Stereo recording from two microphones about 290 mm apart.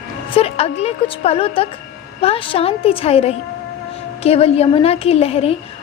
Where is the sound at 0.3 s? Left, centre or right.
Centre.